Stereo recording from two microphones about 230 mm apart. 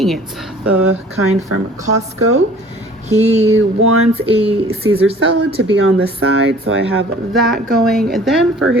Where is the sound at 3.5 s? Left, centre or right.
Right.